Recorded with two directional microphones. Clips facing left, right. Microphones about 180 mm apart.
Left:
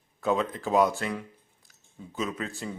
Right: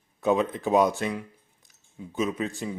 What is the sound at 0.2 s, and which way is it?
Speech, 20° right (ahead or behind).